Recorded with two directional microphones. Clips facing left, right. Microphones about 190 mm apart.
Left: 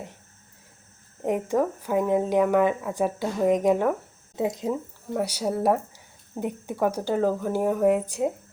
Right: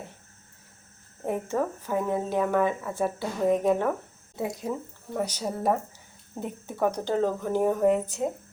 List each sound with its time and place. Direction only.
1.2 s speech: 15° left (ahead or behind)
5.1 s speech: 10° left (ahead or behind)